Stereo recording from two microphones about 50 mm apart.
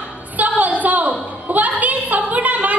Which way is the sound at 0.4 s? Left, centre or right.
Right.